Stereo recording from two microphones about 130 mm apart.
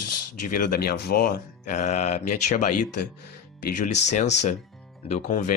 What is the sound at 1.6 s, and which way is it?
Speech, 65° left (ahead or behind).